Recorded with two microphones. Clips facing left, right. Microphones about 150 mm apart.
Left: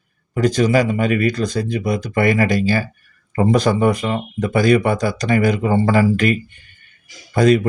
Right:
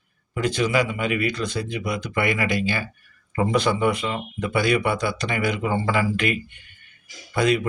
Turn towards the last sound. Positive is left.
turn(degrees=40)  # may be behind; listen again after turning